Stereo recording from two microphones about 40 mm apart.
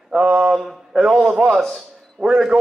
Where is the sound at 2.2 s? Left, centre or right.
Centre.